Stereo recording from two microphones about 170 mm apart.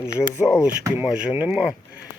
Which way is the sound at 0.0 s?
5° right (ahead or behind).